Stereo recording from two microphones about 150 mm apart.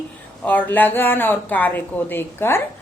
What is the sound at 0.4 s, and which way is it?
Speech, 10° left (ahead or behind).